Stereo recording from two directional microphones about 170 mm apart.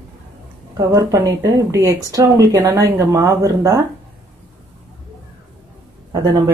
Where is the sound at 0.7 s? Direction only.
20° right (ahead or behind).